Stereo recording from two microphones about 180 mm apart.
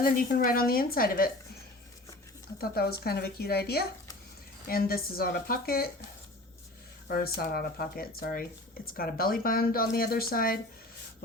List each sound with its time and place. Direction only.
0.0 s speech: 50° left (ahead or behind)
2.6 s speech: 60° left (ahead or behind)
7.1 s speech: 55° left (ahead or behind)